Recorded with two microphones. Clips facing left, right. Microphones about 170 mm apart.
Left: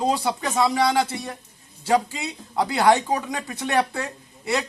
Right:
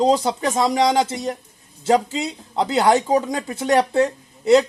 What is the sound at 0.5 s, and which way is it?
Speech, 35° right (ahead or behind).